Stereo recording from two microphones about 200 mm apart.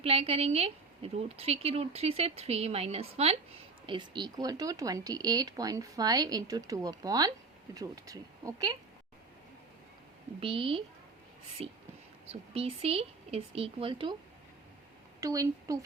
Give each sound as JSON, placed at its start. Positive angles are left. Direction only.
{"t": 0.0, "sound": "a woman's voice", "side_deg": -30}
{"t": 10.4, "sound": "a woman's voice", "side_deg": -25}
{"t": 15.2, "sound": "a woman's voice", "side_deg": -15}